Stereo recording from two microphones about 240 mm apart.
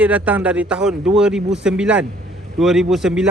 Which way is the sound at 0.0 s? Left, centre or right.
Centre.